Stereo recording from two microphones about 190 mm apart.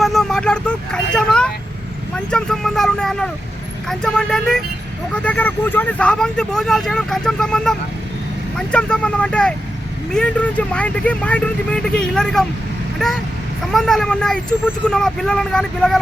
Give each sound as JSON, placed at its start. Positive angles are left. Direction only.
{"t": 0.0, "sound": "vehicle", "side_deg": 0}
{"t": 2.1, "sound": "speech", "side_deg": 5}